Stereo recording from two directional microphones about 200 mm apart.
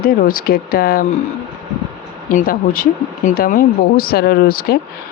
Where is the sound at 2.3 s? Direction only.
45° left (ahead or behind).